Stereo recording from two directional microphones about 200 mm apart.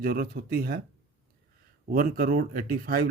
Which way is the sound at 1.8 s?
45° right (ahead or behind).